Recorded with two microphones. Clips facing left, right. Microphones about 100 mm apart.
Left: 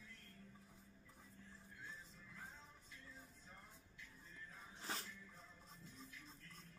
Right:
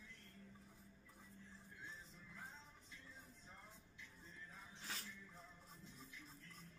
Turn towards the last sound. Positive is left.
turn(degrees=35)  # may be behind; listen again after turning